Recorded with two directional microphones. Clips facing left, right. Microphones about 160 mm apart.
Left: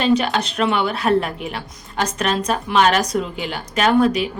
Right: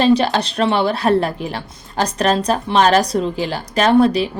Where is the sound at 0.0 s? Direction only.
35° right (ahead or behind).